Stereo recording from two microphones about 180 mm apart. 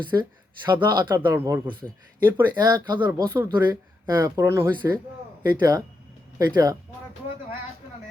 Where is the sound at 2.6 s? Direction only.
25° right (ahead or behind).